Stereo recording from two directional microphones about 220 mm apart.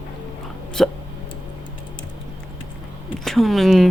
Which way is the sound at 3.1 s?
Centre (ahead or behind).